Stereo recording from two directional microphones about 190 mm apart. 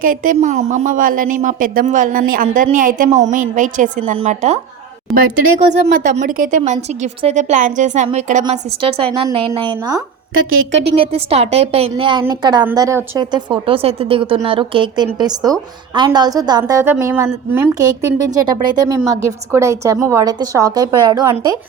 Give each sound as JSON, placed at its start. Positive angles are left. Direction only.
{"t": 0.0, "sound": "a woman's voice", "side_deg": -45}
{"t": 5.1, "sound": "a woman's voice", "side_deg": 0}
{"t": 6.1, "sound": "a woman's voice", "side_deg": -45}